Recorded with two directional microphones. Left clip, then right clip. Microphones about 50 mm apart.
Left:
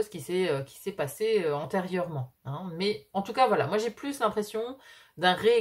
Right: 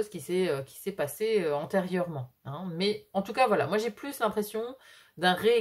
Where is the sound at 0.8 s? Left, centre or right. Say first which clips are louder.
Left 1 dB; right.